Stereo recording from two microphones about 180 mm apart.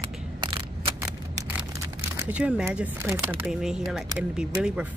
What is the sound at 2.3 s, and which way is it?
Speech, 5° right (ahead or behind).